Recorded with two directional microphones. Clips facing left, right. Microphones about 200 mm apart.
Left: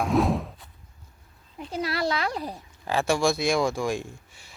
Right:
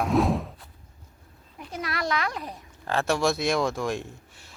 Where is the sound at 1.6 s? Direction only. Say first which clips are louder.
Left 4 dB; 30° left (ahead or behind).